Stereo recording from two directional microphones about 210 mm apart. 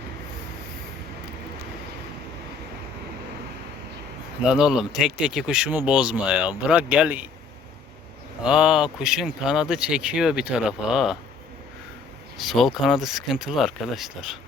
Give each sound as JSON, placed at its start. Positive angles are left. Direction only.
{"t": 4.4, "sound": "speech", "side_deg": -5}
{"t": 8.4, "sound": "speech", "side_deg": -5}
{"t": 12.4, "sound": "speech", "side_deg": 0}